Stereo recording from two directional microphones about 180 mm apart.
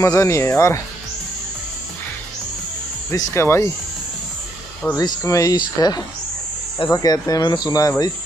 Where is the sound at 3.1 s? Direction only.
15° left (ahead or behind).